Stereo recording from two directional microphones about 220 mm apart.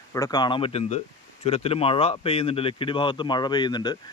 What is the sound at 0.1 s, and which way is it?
Speech, 15° left (ahead or behind).